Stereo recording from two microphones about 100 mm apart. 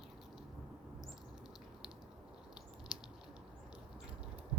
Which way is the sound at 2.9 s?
10° right (ahead or behind).